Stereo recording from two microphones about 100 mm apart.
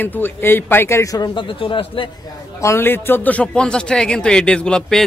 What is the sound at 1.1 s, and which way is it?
Speech, 45° left (ahead or behind).